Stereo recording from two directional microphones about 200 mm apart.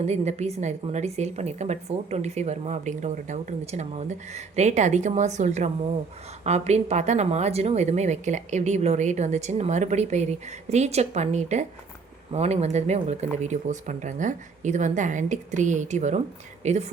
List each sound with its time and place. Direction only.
0.0 s a woman's voice: 35° right (ahead or behind)